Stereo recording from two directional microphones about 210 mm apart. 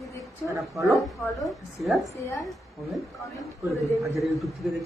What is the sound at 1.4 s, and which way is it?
Speech, centre (ahead or behind).